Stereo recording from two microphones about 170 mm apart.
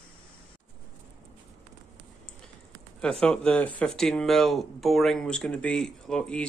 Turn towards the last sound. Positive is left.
turn(degrees=5)  # may be behind; listen again after turning